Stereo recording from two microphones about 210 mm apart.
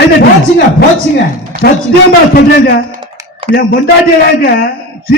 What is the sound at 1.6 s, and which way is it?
A man's voice, 50° left (ahead or behind).